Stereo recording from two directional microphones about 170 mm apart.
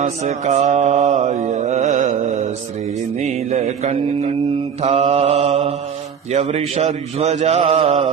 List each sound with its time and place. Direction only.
0.0 s mantra: 40° right (ahead or behind)